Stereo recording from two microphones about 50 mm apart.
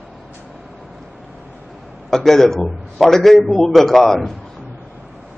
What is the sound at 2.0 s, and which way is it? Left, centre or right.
A man's voice, centre.